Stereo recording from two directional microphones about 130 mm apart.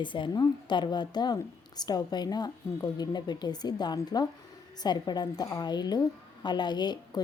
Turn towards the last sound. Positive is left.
turn(degrees=35)  # may be behind; listen again after turning